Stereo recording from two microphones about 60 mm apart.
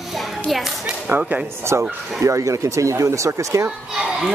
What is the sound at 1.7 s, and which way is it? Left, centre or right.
Speech, right.